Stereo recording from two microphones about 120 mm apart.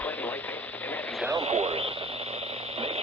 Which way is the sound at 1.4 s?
55° right (ahead or behind).